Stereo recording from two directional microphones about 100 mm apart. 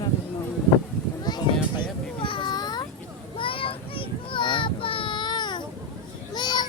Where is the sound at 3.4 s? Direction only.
60° left (ahead or behind).